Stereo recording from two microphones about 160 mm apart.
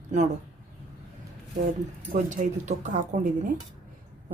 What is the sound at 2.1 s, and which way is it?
A woman's voice, 50° right (ahead or behind).